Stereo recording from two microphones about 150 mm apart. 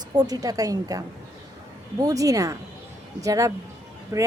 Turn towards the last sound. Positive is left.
turn(degrees=-20)  # may be behind; listen again after turning